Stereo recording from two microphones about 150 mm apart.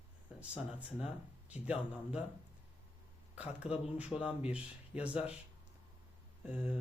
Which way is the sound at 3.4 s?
10° right (ahead or behind).